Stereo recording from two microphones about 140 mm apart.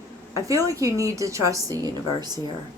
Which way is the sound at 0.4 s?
25° right (ahead or behind).